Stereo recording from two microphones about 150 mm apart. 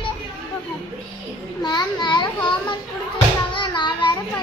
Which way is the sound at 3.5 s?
30° left (ahead or behind).